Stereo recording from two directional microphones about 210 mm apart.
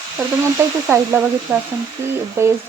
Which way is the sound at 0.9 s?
10° right (ahead or behind).